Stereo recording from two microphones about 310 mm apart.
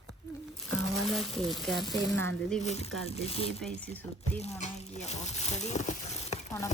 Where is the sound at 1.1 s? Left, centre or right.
Centre.